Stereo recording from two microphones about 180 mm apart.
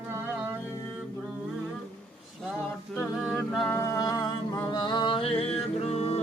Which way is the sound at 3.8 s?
15° left (ahead or behind).